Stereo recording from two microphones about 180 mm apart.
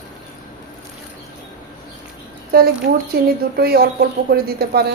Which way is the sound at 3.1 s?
60° right (ahead or behind).